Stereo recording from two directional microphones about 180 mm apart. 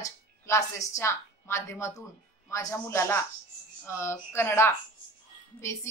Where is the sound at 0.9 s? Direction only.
15° left (ahead or behind).